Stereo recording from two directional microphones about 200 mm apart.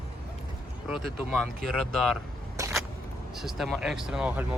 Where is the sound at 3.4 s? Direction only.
Centre (ahead or behind).